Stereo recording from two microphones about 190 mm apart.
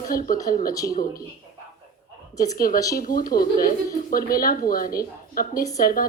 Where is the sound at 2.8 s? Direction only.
20° left (ahead or behind).